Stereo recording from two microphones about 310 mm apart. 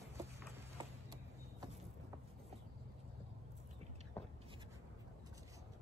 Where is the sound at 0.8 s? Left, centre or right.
Centre.